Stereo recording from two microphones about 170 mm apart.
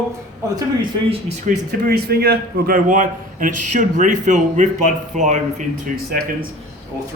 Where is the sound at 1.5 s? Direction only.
65° right (ahead or behind); by 6.0 s 50° right (ahead or behind).